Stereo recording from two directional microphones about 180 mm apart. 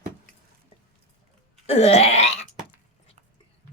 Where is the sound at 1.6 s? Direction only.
35° left (ahead or behind).